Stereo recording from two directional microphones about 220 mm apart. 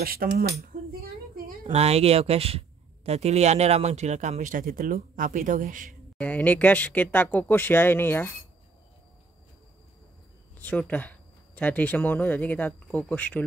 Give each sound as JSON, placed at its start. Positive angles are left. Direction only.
{"t": 0.0, "sound": "a woman's voice", "side_deg": -40}
{"t": 6.1, "sound": "speech", "side_deg": 5}
{"t": 10.6, "sound": "speech", "side_deg": 5}